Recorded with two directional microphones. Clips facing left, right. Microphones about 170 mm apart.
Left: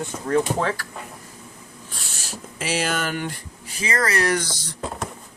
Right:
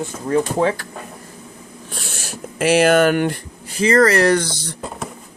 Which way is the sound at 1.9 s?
60° right (ahead or behind).